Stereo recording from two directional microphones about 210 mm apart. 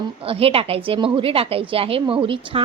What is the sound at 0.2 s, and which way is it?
A woman's voice, 25° right (ahead or behind).